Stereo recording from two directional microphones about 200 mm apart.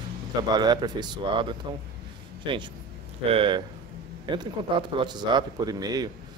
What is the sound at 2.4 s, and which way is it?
Speech, 25° right (ahead or behind).